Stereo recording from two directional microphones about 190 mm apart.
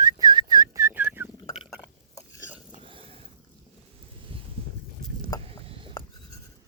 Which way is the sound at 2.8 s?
30° right (ahead or behind).